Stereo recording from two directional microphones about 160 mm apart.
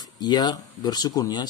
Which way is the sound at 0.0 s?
25° left (ahead or behind).